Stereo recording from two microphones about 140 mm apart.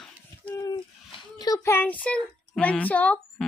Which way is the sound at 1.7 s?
10° left (ahead or behind).